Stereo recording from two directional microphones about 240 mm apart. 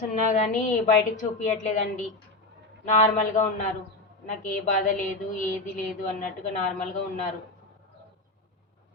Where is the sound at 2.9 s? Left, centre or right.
Left.